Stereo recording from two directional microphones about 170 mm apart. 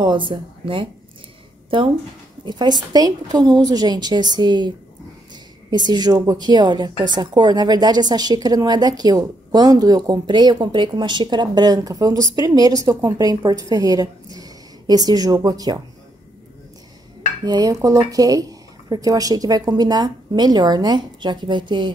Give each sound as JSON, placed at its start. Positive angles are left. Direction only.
{"t": 0.0, "sound": "a woman's voice", "side_deg": -30}
{"t": 17.5, "sound": "a woman's voice", "side_deg": -20}